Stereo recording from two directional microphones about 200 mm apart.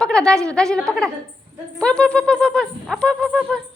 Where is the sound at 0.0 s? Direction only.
5° left (ahead or behind).